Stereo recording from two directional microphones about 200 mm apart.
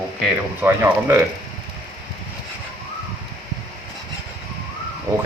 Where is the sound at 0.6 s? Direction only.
15° right (ahead or behind).